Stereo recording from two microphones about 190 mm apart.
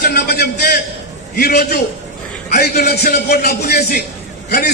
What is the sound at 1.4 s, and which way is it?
A man's voice, 55° left (ahead or behind).